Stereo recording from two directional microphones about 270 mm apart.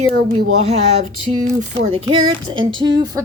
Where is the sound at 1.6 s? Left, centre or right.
Right.